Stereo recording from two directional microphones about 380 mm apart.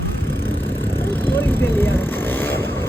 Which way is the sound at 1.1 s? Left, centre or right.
Centre.